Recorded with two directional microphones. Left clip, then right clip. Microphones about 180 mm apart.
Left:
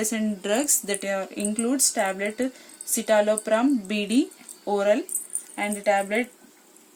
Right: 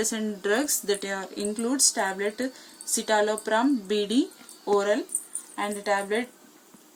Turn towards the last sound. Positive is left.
turn(degrees=65)  # may be behind; listen again after turning